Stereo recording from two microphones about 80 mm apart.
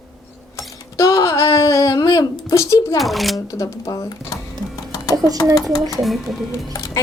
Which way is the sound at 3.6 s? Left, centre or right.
Left.